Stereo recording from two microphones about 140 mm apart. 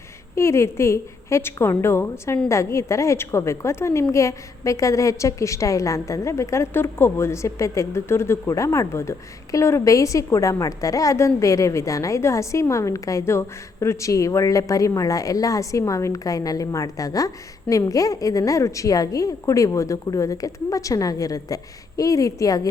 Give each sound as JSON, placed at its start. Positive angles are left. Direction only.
{"t": 0.3, "sound": "a woman's voice", "side_deg": 20}